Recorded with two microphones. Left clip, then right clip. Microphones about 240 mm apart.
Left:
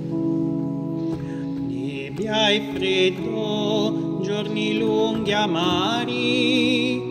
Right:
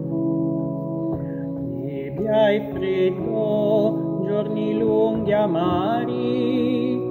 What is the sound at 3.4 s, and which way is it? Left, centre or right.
Music, centre.